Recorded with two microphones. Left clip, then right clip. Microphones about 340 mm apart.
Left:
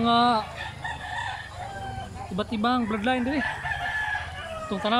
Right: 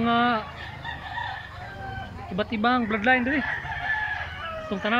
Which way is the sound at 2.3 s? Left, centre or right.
Centre.